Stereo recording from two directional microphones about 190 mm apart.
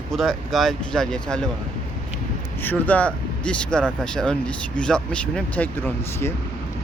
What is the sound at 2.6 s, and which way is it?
Speech, 10° left (ahead or behind).